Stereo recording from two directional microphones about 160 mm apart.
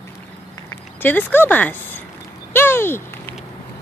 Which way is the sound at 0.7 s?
10° left (ahead or behind).